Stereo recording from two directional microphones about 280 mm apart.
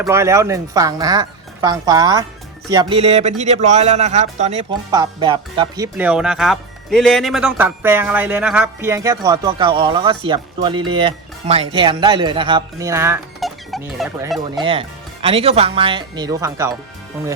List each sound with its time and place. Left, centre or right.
0.0 s speech: centre
14.6 s speech: centre